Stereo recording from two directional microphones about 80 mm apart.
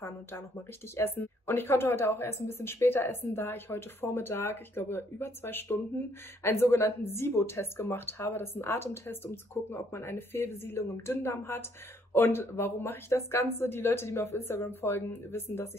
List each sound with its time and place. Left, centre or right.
0.9 s speech: left